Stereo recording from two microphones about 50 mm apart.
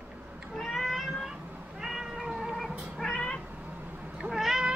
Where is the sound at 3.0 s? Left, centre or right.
Centre.